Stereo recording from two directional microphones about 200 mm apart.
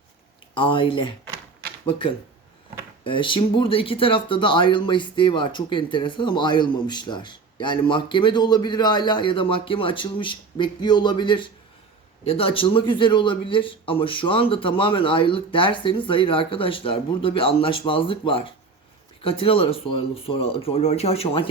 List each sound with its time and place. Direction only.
0.5 s speech: 25° left (ahead or behind)